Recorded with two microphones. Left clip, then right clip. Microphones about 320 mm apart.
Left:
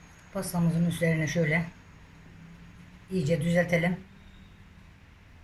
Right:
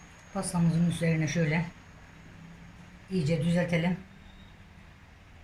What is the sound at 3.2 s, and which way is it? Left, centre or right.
Speech, left.